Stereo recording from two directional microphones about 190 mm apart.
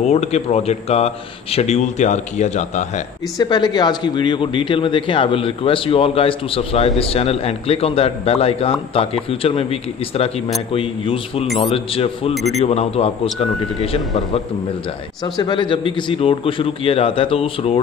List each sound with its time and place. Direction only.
0.0 s a man's voice: 35° left (ahead or behind)
3.3 s a man's voice: 20° left (ahead or behind)
11.4 s speech: centre (ahead or behind)
11.7 s a man's voice: 30° left (ahead or behind)
15.2 s speech: 20° left (ahead or behind)